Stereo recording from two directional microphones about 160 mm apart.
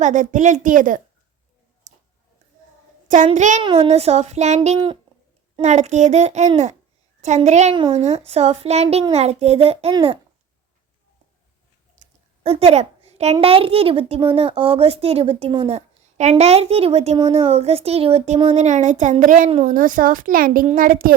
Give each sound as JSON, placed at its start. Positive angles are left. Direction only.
{"t": 0.0, "sound": "a child's voice", "side_deg": -50}
{"t": 1.9, "sound": "a sound", "side_deg": -55}
{"t": 3.3, "sound": "a child's voice", "side_deg": -50}
{"t": 3.6, "sound": "a woman's voice", "side_deg": -35}
{"t": 7.8, "sound": "a woman's voice", "side_deg": -30}
{"t": 8.0, "sound": "a woman's voice", "side_deg": -40}
{"t": 12.0, "sound": "a sound", "side_deg": -55}
{"t": 12.4, "sound": "a woman's voice", "side_deg": -40}